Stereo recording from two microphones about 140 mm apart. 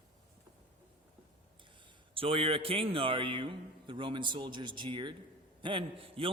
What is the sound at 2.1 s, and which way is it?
A man's voice, 40° right (ahead or behind).